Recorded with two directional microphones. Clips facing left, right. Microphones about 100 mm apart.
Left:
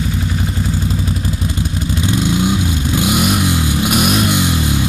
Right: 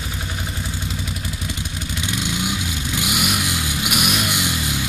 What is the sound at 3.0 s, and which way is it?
Vehicle, 35° left (ahead or behind).